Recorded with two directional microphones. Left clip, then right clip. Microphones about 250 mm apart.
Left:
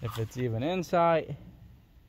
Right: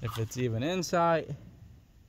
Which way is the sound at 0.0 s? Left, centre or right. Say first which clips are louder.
Even; centre.